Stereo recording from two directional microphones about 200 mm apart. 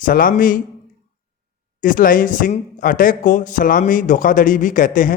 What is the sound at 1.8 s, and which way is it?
A man's voice, 45° left (ahead or behind).